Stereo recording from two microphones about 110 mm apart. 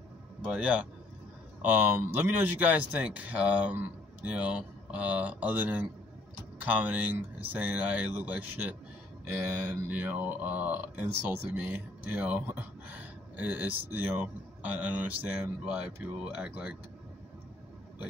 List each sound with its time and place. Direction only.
0.4 s speech: 10° right (ahead or behind)